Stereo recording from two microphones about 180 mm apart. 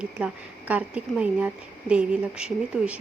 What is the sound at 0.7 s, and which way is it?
Speech, 5° right (ahead or behind).